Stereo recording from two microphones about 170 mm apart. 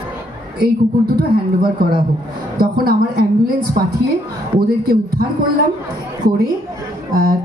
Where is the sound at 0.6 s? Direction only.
65° right (ahead or behind).